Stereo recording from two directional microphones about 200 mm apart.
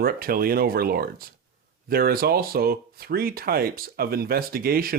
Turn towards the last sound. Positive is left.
turn(degrees=-50)  # may be behind; listen again after turning